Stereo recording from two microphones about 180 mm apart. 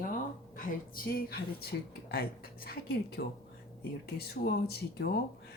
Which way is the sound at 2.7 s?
60° left (ahead or behind).